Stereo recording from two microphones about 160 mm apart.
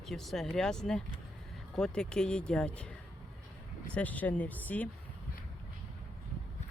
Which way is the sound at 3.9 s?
10° left (ahead or behind).